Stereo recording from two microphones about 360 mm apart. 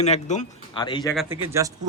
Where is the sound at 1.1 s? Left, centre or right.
Centre.